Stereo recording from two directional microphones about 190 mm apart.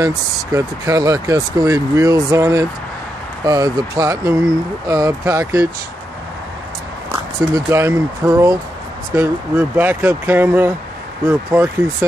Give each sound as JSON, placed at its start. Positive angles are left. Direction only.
{"t": 0.0, "sound": "speech", "side_deg": -15}
{"t": 7.1, "sound": "speech", "side_deg": -15}